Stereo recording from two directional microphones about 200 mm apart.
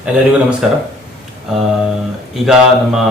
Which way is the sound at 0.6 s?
Centre (ahead or behind).